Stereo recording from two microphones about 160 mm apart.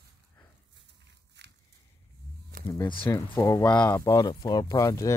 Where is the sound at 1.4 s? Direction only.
90° right.